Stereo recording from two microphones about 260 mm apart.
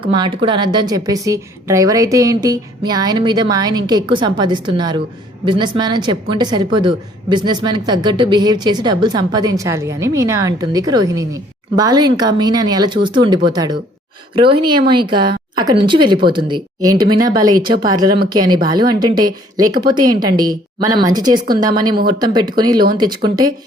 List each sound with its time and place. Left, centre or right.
0.0 s a woman's voice: centre